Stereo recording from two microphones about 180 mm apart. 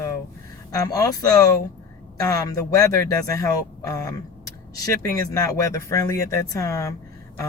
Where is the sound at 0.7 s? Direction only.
20° left (ahead or behind).